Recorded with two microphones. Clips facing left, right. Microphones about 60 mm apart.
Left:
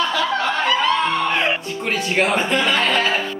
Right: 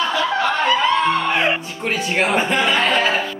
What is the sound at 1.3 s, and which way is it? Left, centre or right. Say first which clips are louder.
Music: right 1 dB; centre.